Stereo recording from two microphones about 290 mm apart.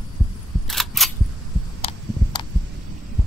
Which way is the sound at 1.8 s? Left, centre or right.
Centre.